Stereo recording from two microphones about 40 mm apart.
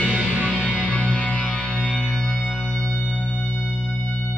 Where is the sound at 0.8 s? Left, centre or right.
Left.